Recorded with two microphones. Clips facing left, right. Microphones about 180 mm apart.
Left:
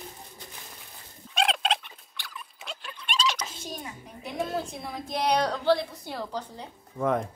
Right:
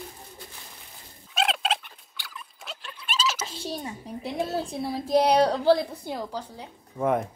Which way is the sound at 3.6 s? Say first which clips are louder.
Right 5 dB; 30° right (ahead or behind).